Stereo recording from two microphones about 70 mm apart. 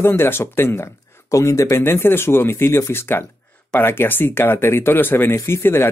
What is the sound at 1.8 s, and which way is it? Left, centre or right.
Speech, left.